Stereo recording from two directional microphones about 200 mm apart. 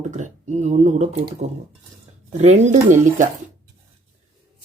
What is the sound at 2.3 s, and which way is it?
Speech, 35° right (ahead or behind).